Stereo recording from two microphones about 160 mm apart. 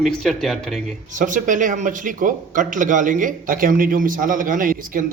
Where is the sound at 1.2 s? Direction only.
55° right (ahead or behind).